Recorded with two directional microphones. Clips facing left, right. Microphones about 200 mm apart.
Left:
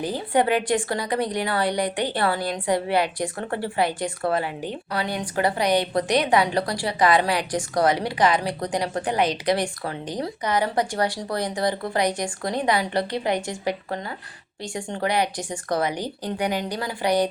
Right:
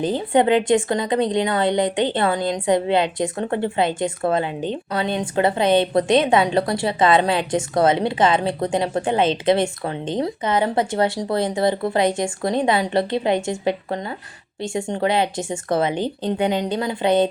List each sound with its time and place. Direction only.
0.0 s a woman's voice: 20° right (ahead or behind)